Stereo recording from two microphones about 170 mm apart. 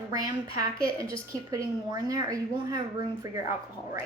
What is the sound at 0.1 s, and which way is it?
Speech, 20° right (ahead or behind).